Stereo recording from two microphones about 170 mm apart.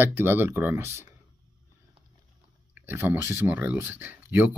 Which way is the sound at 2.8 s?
10° right (ahead or behind).